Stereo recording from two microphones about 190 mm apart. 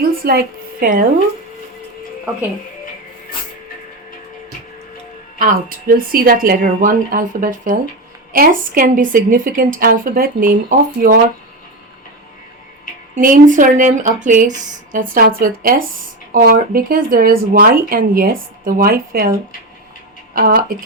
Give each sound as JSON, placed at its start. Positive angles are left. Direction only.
{"t": 0.3, "sound": "a woman's voice", "side_deg": -50}
{"t": 5.4, "sound": "speech", "side_deg": -45}
{"t": 13.1, "sound": "speech", "side_deg": -45}
{"t": 20.3, "sound": "speech", "side_deg": -50}